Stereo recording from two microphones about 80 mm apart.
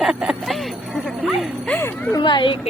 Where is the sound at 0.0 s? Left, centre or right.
Centre.